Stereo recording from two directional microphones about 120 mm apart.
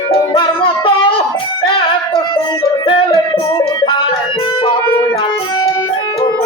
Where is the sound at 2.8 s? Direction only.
50° left (ahead or behind).